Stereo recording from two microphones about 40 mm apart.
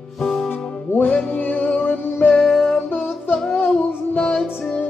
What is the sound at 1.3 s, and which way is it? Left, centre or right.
Music, left.